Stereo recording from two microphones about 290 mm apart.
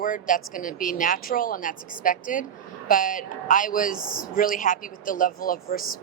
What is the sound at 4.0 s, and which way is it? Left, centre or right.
Speech, centre.